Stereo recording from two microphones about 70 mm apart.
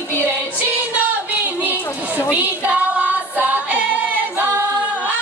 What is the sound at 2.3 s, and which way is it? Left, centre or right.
Music, right.